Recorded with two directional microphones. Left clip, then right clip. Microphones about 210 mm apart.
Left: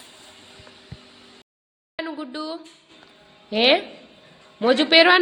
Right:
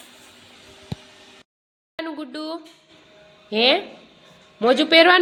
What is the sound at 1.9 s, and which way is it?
A woman's voice, 5° right (ahead or behind).